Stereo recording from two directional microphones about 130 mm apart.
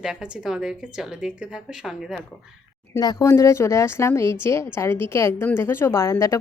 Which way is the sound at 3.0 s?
30° left (ahead or behind).